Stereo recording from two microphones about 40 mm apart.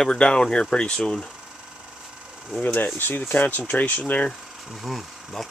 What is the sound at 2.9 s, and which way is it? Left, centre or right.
Speech, left.